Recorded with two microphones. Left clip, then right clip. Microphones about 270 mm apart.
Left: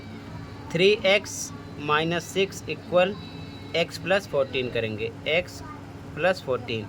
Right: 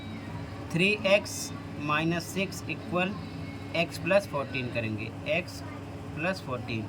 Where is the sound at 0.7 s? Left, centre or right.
Centre.